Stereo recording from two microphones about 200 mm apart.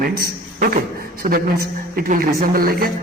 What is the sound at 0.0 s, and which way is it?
A man's voice, 50° right (ahead or behind).